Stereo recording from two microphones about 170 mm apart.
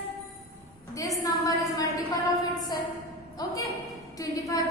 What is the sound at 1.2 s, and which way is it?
Speech, 20° left (ahead or behind).